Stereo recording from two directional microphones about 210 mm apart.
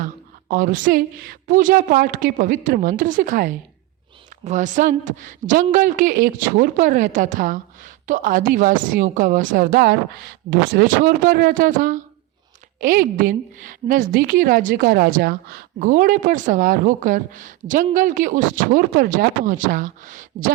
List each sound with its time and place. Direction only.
0.0 s a woman's voice: 40° right (ahead or behind)